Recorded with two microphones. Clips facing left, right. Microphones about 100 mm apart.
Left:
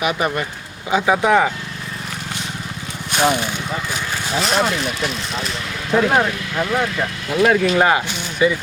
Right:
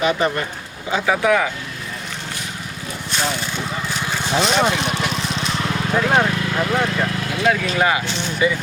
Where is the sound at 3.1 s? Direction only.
55° left (ahead or behind).